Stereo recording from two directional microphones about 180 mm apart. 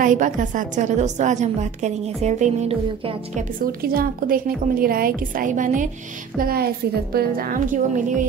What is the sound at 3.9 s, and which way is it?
A woman's voice, 55° right (ahead or behind).